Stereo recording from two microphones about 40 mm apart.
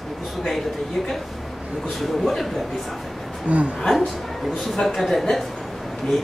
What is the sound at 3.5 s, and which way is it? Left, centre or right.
Speech, right.